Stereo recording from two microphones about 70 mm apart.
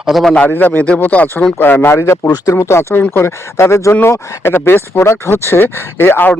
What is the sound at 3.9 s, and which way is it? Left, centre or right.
Speech, left.